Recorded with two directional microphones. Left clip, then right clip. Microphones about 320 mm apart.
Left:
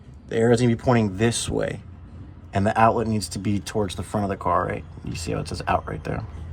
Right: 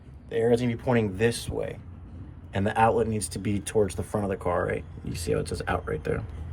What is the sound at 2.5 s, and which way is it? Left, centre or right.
Speech, centre.